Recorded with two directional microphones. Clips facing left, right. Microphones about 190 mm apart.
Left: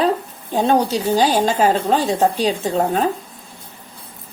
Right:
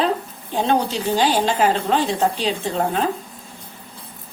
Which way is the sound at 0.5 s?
40° left (ahead or behind).